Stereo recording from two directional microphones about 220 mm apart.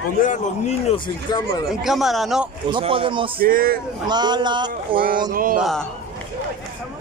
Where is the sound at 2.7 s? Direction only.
25° right (ahead or behind).